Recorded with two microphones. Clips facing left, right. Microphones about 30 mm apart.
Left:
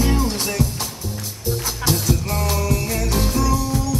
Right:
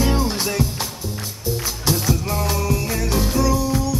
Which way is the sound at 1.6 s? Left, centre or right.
Centre.